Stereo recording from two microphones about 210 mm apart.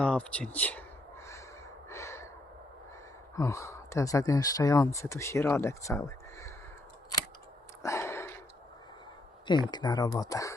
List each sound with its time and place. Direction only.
0.0 s speech: 5° left (ahead or behind)
1.9 s gasp: 15° left (ahead or behind)
3.3 s speech: 15° left (ahead or behind)
7.8 s a sound: 15° left (ahead or behind)
9.5 s speech: 20° left (ahead or behind)